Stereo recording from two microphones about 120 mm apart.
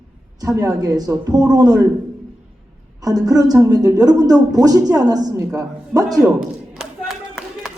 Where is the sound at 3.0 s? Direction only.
30° right (ahead or behind).